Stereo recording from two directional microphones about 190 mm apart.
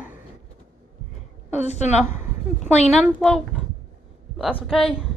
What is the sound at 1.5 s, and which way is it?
Speech, 35° left (ahead or behind).